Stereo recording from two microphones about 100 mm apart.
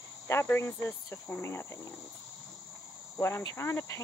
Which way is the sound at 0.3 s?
25° left (ahead or behind).